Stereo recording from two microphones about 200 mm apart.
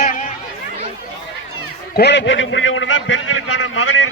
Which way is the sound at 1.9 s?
60° left (ahead or behind).